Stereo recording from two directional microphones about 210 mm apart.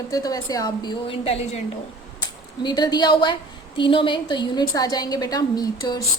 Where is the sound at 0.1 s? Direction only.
15° left (ahead or behind).